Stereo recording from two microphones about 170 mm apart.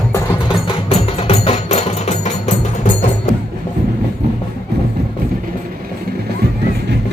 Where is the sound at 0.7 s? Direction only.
35° left (ahead or behind).